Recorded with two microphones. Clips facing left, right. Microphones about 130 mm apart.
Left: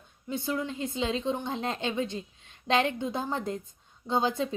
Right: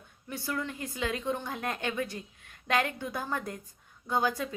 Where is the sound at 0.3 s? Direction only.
20° left (ahead or behind).